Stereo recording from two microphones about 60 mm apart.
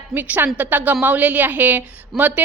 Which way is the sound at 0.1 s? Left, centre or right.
Right.